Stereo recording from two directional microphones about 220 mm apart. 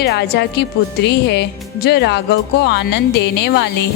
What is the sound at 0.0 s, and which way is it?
Speech, 50° left (ahead or behind).